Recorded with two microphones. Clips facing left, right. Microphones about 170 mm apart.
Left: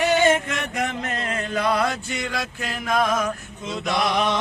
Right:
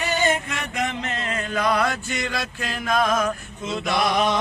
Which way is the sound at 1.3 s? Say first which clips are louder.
Even; 30° left (ahead or behind).